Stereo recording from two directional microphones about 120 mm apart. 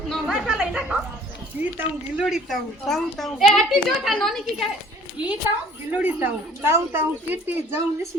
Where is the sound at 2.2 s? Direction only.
5° right (ahead or behind).